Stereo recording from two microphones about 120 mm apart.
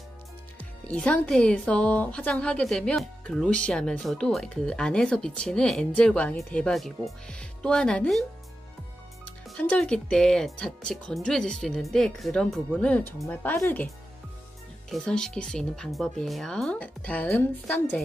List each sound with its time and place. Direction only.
0.6 s speech: 10° left (ahead or behind)
9.6 s speech: 10° left (ahead or behind)
14.9 s speech: 5° left (ahead or behind)